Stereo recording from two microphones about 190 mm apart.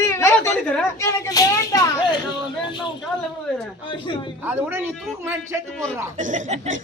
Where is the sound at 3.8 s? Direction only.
25° left (ahead or behind).